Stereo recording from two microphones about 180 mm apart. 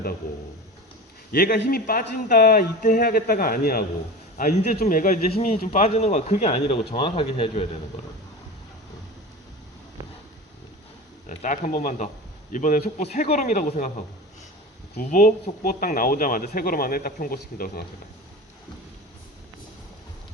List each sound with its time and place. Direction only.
1.3 s a man's voice: 60° left (ahead or behind); by 7.7 s 35° left (ahead or behind)
10.0 s a sound: 20° right (ahead or behind)
11.3 s speech: 45° left (ahead or behind)
14.9 s speech: 55° left (ahead or behind)